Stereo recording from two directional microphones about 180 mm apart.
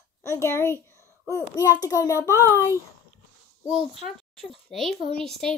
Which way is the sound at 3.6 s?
30° right (ahead or behind).